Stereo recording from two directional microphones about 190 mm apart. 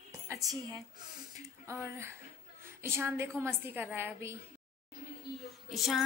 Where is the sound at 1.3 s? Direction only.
15° right (ahead or behind).